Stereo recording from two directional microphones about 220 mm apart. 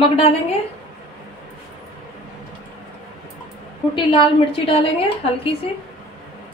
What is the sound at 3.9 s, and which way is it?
A woman's voice, 25° left (ahead or behind).